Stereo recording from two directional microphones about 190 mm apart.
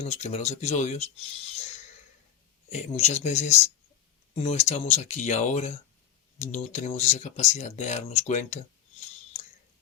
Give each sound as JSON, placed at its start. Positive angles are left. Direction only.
{"t": 0.0, "sound": "speech", "side_deg": 35}
{"t": 2.7, "sound": "speech", "side_deg": 35}